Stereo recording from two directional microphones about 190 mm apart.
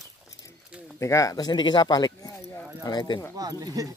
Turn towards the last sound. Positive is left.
turn(degrees=-20)  # may be behind; listen again after turning